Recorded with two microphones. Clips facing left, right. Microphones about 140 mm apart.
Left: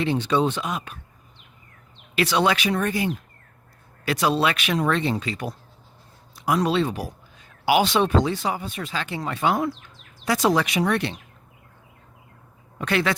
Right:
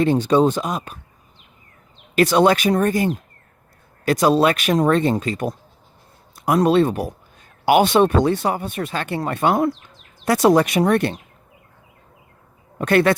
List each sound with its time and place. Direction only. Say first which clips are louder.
0.0 s speech: right 6 dB; 45° right (ahead or behind)
2.1 s speech: right 6 dB; 45° right (ahead or behind)
12.8 s speech: right 7 dB; 50° right (ahead or behind)